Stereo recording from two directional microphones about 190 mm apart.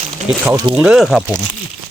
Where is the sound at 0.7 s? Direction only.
5° right (ahead or behind).